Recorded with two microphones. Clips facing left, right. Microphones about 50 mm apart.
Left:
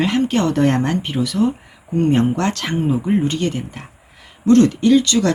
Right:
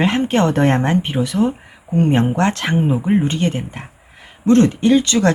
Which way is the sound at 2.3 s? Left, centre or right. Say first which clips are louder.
Right 3 dB; right.